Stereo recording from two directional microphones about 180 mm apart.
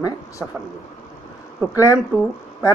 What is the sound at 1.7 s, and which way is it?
Speech, 20° left (ahead or behind).